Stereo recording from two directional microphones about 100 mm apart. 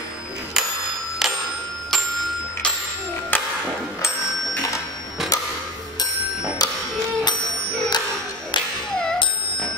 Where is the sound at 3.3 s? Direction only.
20° left (ahead or behind).